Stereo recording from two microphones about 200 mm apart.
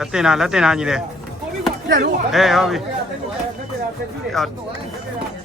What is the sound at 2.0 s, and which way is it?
Speech, 45° right (ahead or behind).